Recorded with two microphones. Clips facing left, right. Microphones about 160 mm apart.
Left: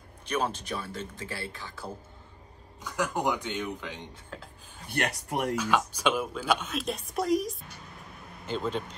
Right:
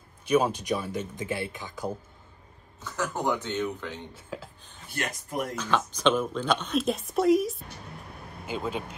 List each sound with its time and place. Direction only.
0.2 s speech: 10° right (ahead or behind)
2.8 s speech: 15° left (ahead or behind)
4.1 s speech: 5° right (ahead or behind)
4.8 s speech: 60° left (ahead or behind)
5.6 s speech: 10° left (ahead or behind); by 8.9 s 10° right (ahead or behind)